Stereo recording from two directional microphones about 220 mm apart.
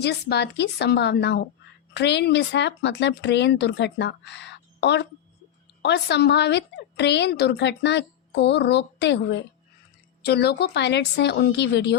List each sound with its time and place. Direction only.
0.0 s a woman's voice: 50° left (ahead or behind)